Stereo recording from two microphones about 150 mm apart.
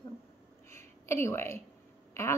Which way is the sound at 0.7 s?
20° left (ahead or behind).